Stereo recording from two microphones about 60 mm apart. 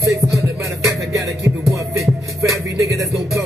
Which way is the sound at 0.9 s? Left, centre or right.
Right.